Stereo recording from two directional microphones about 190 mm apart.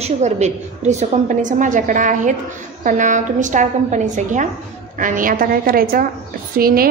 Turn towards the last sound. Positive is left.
turn(degrees=-50)  # may be behind; listen again after turning